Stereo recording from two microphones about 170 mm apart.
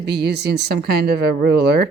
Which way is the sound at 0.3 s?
80° right.